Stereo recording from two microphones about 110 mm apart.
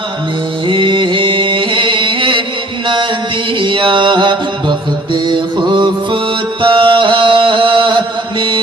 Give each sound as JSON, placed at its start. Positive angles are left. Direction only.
{"t": 0.7, "sound": "music", "side_deg": -50}
{"t": 5.1, "sound": "mantra", "side_deg": -45}
{"t": 6.6, "sound": "music", "side_deg": -50}